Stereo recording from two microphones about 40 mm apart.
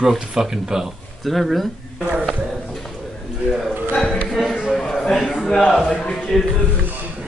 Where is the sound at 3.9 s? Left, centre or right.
Left.